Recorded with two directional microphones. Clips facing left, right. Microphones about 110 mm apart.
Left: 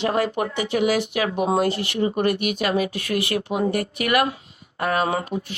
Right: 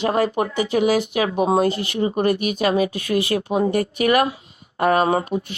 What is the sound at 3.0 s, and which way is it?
Speech, 25° right (ahead or behind).